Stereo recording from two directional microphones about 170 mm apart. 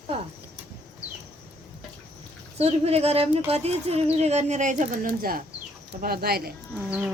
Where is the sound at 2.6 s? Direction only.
35° right (ahead or behind); by 6.5 s 65° right (ahead or behind).